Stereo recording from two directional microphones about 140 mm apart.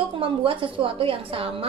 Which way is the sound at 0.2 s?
40° right (ahead or behind).